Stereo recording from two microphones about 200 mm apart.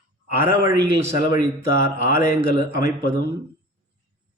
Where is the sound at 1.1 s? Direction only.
45° left (ahead or behind).